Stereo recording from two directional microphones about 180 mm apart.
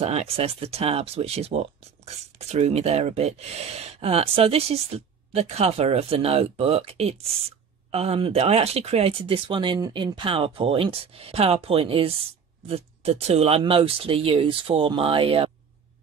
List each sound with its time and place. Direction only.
0.0 s speech: 35° right (ahead or behind)